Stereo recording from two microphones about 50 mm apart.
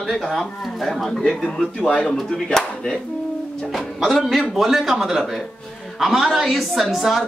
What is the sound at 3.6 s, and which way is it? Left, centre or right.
Speech, centre.